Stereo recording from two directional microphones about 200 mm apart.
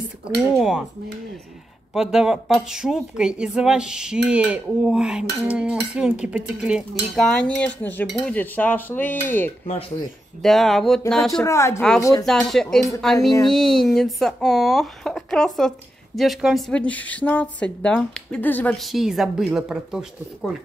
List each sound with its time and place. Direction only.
0.5 s a woman's voice: centre (ahead or behind)
2.0 s a woman's voice: centre (ahead or behind)
8.1 s cutlery: 5° left (ahead or behind)
10.4 s a woman's voice: centre (ahead or behind)
11.4 s cutlery: 15° left (ahead or behind)
12.3 s a woman's voice: centre (ahead or behind)